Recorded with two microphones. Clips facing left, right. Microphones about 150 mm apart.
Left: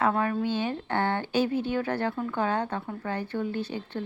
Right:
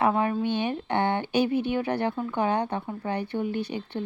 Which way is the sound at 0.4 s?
15° right (ahead or behind).